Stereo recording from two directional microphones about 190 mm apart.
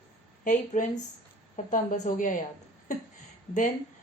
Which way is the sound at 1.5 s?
45° left (ahead or behind).